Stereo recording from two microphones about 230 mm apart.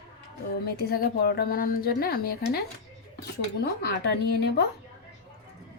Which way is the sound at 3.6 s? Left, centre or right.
Left.